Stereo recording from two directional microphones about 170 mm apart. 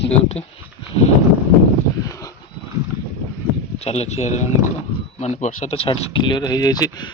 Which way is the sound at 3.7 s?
40° left (ahead or behind).